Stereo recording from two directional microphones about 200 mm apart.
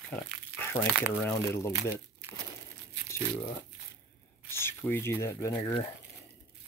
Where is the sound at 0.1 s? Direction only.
10° left (ahead or behind).